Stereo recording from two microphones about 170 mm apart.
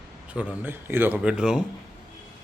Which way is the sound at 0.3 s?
10° right (ahead or behind).